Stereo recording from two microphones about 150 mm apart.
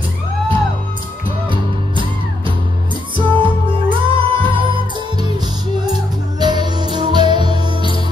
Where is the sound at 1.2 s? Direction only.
35° right (ahead or behind).